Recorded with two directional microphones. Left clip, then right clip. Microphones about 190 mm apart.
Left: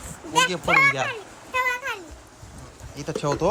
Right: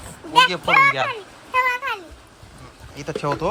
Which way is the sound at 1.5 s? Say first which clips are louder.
Right 4 dB; 15° right (ahead or behind).